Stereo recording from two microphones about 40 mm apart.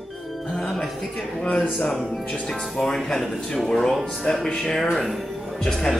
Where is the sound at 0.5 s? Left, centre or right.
Centre.